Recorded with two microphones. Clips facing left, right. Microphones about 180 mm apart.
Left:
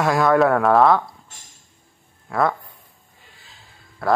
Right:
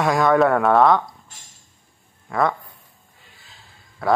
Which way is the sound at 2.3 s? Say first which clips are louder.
Even; centre (ahead or behind).